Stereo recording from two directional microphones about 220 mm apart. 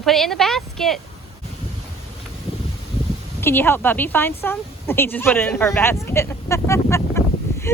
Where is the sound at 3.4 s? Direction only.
10° left (ahead or behind).